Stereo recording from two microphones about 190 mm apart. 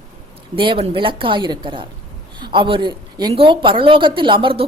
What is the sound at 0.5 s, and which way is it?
A woman's voice, 25° right (ahead or behind).